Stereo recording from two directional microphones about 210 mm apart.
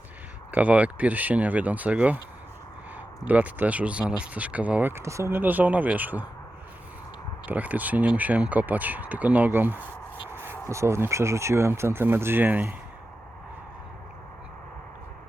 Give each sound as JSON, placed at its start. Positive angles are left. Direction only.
{"t": 0.5, "sound": "speech", "side_deg": -5}
{"t": 3.2, "sound": "speech", "side_deg": -10}
{"t": 7.4, "sound": "speech", "side_deg": -10}